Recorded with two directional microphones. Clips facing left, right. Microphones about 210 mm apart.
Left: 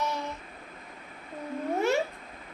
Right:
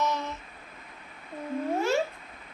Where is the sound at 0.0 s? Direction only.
10° left (ahead or behind).